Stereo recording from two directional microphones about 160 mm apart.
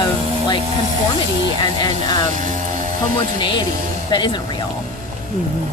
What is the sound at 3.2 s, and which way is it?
Speech, 30° left (ahead or behind).